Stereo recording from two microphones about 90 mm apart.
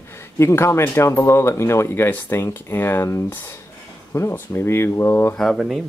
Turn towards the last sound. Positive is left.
turn(degrees=0)  # may be behind; listen again after turning